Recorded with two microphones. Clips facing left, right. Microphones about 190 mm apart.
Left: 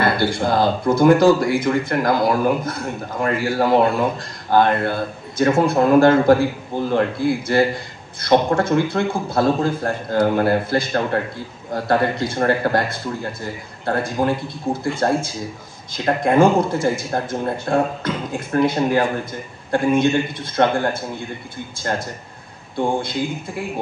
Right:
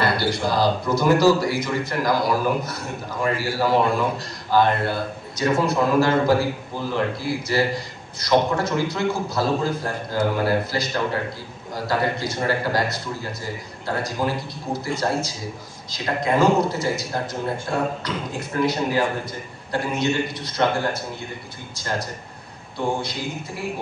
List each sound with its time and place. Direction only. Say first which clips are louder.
0.0 s speech: left 3 dB; 55° left (ahead or behind)